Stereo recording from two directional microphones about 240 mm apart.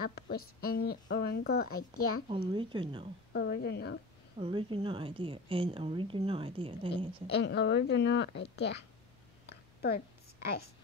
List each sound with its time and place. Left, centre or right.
0.0 s speech: left
2.5 s a woman's voice: right
3.3 s a woman's voice: left
4.4 s a woman's voice: right
7.2 s a woman's voice: left
9.5 s a sound: left